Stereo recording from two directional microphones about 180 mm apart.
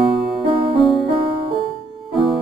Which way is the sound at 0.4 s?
30° right (ahead or behind).